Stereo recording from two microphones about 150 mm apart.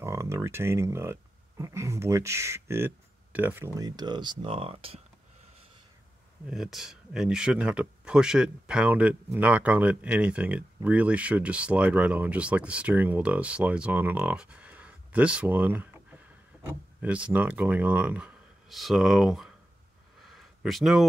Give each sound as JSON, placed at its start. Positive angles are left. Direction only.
{"t": 0.0, "sound": "speech", "side_deg": -20}
{"t": 6.5, "sound": "speech", "side_deg": 0}
{"t": 20.2, "sound": "a sound", "side_deg": 0}